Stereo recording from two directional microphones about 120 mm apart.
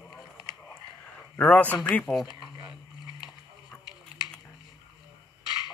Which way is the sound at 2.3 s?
40° left (ahead or behind).